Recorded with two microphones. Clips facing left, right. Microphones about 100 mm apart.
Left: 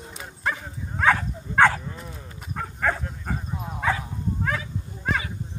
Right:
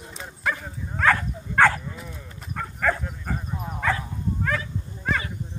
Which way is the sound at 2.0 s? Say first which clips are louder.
Even; 25° left (ahead or behind).